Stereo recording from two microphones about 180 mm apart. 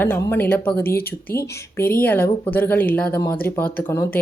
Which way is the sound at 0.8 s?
55° left (ahead or behind).